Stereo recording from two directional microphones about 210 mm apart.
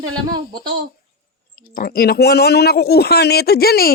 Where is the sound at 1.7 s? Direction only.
45° left (ahead or behind).